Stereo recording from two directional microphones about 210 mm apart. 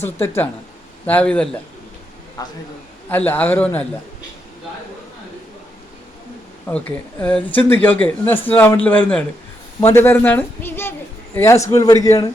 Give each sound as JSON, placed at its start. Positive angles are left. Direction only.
{"t": 0.0, "sound": "speech", "side_deg": 10}
{"t": 2.4, "sound": "speech", "side_deg": 20}
{"t": 6.7, "sound": "speech", "side_deg": 5}